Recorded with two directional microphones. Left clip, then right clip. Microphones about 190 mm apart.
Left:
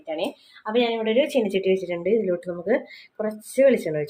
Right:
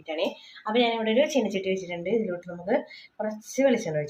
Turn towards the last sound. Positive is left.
turn(degrees=25)  # may be behind; listen again after turning